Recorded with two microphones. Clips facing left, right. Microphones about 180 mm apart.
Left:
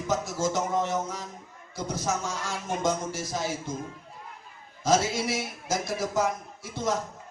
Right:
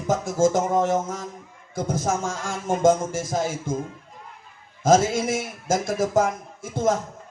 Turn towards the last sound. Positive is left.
turn(degrees=-50)  # may be behind; listen again after turning